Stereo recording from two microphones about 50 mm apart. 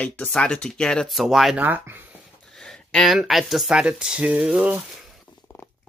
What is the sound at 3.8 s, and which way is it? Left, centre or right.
Speech, right.